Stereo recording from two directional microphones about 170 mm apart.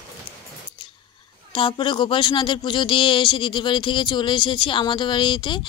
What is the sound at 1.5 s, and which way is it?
Speech, 30° left (ahead or behind).